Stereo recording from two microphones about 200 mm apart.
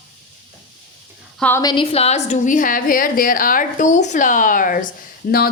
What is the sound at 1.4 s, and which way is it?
Speech, 10° left (ahead or behind).